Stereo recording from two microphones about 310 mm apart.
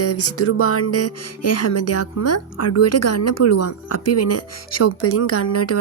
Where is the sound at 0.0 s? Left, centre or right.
Left.